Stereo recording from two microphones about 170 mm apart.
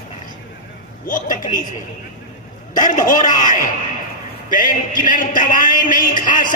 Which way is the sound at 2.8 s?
50° left (ahead or behind).